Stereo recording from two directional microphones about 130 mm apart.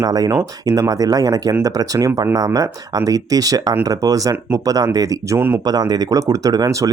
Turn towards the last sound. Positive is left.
turn(degrees=-30)  # may be behind; listen again after turning